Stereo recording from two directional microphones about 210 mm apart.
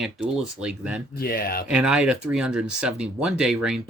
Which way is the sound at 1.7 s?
5° right (ahead or behind).